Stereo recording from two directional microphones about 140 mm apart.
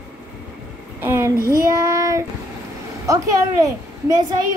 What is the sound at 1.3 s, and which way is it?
Child singing, 20° left (ahead or behind).